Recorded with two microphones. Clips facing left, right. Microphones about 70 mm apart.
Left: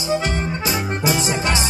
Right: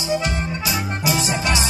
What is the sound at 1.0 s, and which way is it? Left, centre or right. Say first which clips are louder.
Music: left 1 dB; left.